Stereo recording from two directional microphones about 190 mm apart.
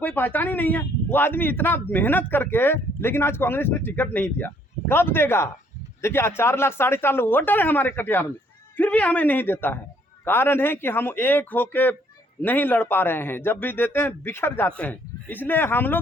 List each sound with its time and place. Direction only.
0.0 s a man's voice: 10° left (ahead or behind)